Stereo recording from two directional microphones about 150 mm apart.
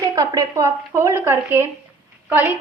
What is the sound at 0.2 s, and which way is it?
A woman's voice, 25° right (ahead or behind).